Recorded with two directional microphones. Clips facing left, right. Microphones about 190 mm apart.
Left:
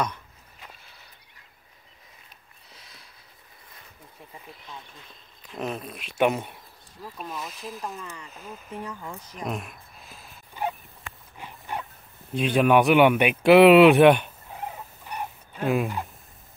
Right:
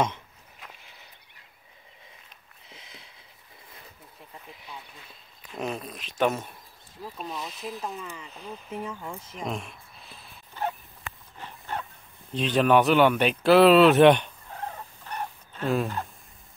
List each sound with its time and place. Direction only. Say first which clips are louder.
2.7 s a sound: right 3 dB; 20° right (ahead or behind)
5.6 s speech: left 1 dB; centre (ahead or behind)
6.2 s speech: left 2 dB; 15° left (ahead or behind)
7.0 s speech: right 1 dB; 15° right (ahead or behind)
7.4 s speech: right 1 dB; centre (ahead or behind)
8.8 s speech: right 1 dB; 10° right (ahead or behind)
9.4 s speech: left 1 dB; 5° left (ahead or behind)
10.1 s dog: left 1 dB; 15° left (ahead or behind)
12.3 s speech: left 1 dB; 10° left (ahead or behind)